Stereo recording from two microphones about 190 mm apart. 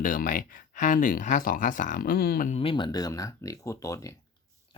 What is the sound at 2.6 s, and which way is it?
Speech, 25° left (ahead or behind).